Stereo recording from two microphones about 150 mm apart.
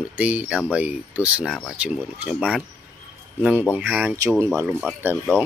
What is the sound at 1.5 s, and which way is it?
Speech, 5° left (ahead or behind).